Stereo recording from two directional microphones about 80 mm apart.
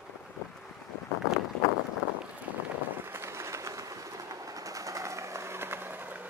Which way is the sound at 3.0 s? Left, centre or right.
Right.